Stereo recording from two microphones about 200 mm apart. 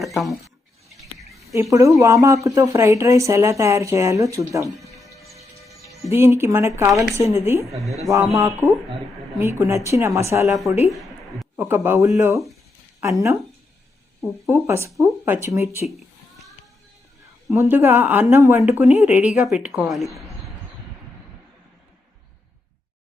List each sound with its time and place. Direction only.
0.0 s a woman's voice: centre (ahead or behind)
1.2 s a sound: centre (ahead or behind)
1.7 s speech: 15° right (ahead or behind)
6.1 s speech: 15° right (ahead or behind)
10.4 s a woman's voice: centre (ahead or behind)
10.8 s a sound: centre (ahead or behind)
11.6 s speech: 10° right (ahead or behind)
14.5 s speech: 15° right (ahead or behind)
17.5 s a woman's voice: 10° right (ahead or behind)